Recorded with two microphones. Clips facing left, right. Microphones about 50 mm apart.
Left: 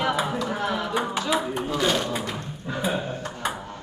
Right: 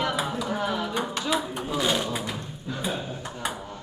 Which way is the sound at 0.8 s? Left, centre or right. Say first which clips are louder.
Left 3 dB; centre.